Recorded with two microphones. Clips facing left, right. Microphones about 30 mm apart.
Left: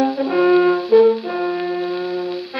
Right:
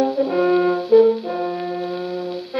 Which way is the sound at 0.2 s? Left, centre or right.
Centre.